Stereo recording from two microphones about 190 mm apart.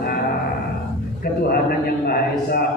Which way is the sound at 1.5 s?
50° left (ahead or behind).